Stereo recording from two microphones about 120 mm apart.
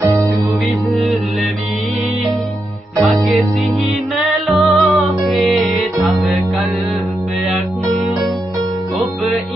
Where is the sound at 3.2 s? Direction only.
Centre (ahead or behind).